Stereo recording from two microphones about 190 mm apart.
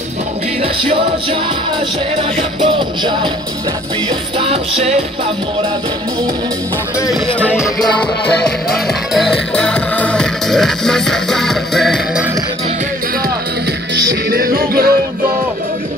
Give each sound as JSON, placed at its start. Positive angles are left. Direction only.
{"t": 0.6, "sound": "music", "side_deg": -30}
{"t": 2.6, "sound": "music", "side_deg": -25}
{"t": 4.4, "sound": "music", "side_deg": -30}
{"t": 7.5, "sound": "music", "side_deg": 0}
{"t": 14.3, "sound": "music", "side_deg": -55}